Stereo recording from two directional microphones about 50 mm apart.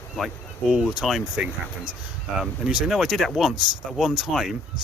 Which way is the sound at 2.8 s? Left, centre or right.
Centre.